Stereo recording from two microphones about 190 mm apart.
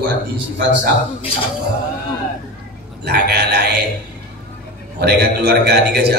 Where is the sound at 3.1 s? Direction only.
55° right (ahead or behind).